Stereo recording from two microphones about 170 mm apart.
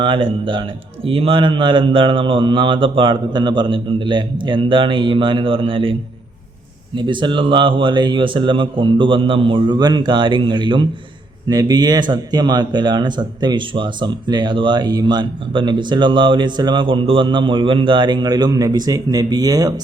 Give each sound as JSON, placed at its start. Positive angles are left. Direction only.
{"t": 0.0, "sound": "speech", "side_deg": -30}